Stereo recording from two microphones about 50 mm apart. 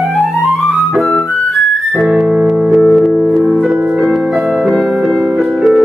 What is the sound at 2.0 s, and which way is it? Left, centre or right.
Music, centre.